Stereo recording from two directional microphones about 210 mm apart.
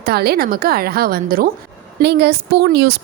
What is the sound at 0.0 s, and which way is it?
Speech, 50° right (ahead or behind).